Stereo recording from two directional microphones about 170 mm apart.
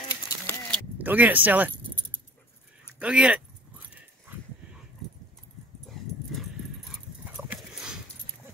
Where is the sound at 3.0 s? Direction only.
5° right (ahead or behind).